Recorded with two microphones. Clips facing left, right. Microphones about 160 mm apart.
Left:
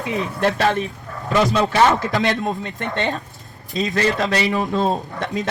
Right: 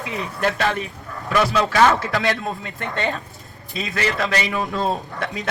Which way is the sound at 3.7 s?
40° left (ahead or behind).